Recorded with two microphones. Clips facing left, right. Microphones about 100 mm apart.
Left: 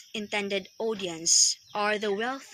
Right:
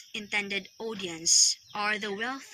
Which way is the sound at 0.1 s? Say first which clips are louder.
Left 6 dB; 45° left (ahead or behind).